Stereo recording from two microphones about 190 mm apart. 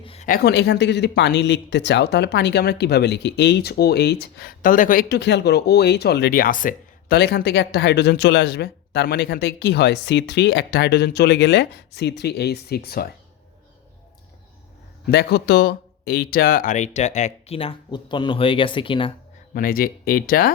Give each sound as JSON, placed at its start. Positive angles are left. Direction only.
{"t": 0.0, "sound": "a sound", "side_deg": 30}
{"t": 0.3, "sound": "speech", "side_deg": 55}
{"t": 15.0, "sound": "speech", "side_deg": 60}
{"t": 19.5, "sound": "speech", "side_deg": 50}